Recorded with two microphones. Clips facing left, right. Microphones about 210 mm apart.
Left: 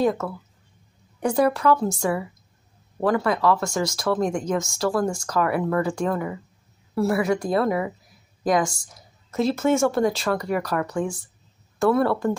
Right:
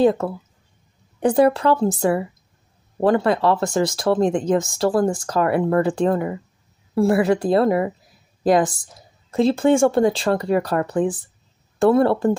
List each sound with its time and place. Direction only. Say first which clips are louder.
0.0 s a woman's voice: right 5 dB; 30° right (ahead or behind)
3.0 s a woman's voice: right 4 dB; 30° right (ahead or behind)